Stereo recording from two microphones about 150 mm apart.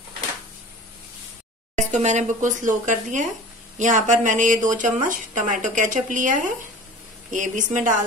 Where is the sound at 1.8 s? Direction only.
50° right (ahead or behind).